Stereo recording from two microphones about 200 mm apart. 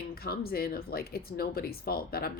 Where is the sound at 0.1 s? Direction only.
50° left (ahead or behind).